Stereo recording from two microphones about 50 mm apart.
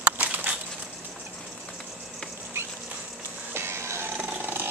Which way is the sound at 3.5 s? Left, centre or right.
Right.